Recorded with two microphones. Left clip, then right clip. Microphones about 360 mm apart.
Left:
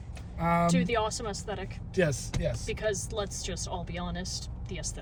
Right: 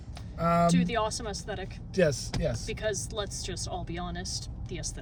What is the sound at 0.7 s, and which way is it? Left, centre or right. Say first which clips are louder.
Speech: even; centre.